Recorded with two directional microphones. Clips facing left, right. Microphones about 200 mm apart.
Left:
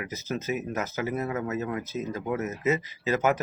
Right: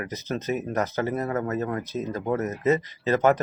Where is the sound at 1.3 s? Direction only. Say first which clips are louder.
Right 3 dB; 50° right (ahead or behind).